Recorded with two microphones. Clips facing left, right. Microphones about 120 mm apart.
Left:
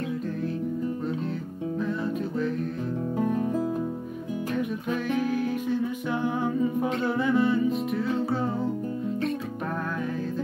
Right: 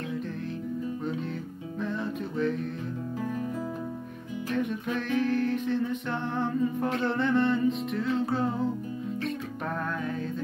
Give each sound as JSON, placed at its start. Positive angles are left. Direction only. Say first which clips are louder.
{"t": 1.8, "sound": "music", "louder": "left 2 dB", "side_deg": 0}
{"t": 3.2, "sound": "music", "louder": "left 7 dB", "side_deg": 40}
{"t": 4.6, "sound": "music", "louder": "right 1 dB", "side_deg": 5}